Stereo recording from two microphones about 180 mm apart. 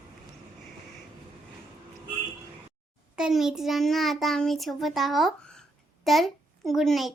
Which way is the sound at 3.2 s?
Centre (ahead or behind).